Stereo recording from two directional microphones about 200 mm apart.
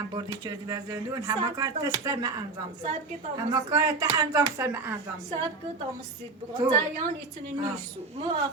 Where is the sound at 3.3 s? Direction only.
20° right (ahead or behind).